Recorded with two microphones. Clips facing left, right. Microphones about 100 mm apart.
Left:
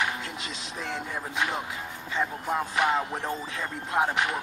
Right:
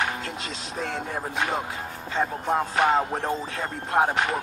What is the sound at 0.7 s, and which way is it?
Speech, 40° right (ahead or behind).